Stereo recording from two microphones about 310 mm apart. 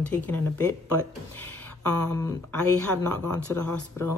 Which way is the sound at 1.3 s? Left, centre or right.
Centre.